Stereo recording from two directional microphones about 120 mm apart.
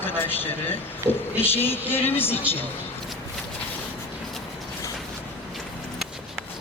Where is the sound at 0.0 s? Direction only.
15° left (ahead or behind).